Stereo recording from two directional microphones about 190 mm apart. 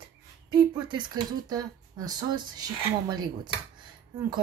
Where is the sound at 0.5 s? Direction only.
25° right (ahead or behind).